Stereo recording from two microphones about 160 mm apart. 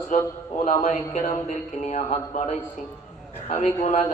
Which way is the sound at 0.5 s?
55° left (ahead or behind).